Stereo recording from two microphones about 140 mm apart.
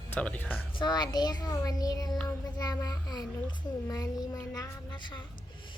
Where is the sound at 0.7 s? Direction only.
30° left (ahead or behind).